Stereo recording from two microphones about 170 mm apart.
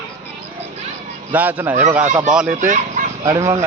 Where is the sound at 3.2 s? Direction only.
20° right (ahead or behind).